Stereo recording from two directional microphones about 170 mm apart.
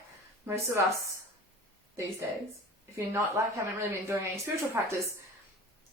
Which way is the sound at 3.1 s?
15° right (ahead or behind).